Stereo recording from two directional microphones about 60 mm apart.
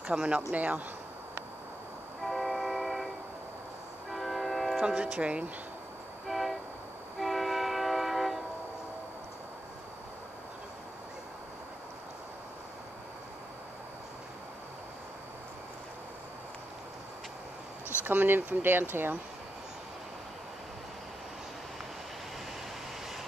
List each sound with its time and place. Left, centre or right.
0.0 s speech: right
2.2 s train: centre
4.1 s music: centre
4.8 s speech: centre
6.2 s vehicle: centre
7.2 s train: centre
18.0 s speech: right